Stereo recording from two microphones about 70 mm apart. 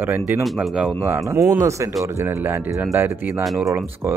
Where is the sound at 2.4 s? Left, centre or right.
Right.